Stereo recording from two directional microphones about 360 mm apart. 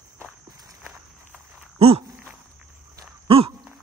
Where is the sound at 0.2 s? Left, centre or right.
Centre.